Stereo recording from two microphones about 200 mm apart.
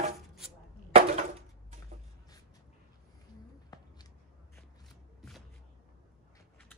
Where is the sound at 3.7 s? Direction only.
20° left (ahead or behind).